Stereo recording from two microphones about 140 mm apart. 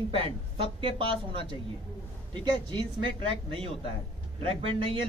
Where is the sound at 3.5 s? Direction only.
40° right (ahead or behind).